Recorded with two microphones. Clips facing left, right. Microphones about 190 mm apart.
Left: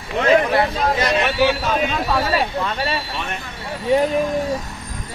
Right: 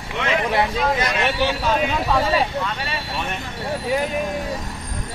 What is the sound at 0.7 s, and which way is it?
Speech, 30° left (ahead or behind).